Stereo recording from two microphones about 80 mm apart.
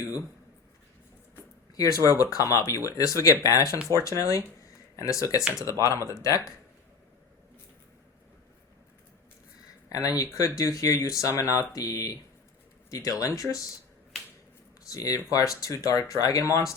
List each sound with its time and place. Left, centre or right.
2.0 s speech: left
5.4 s speech: centre
5.8 s speech: left
9.9 s speech: left
14.8 s speech: left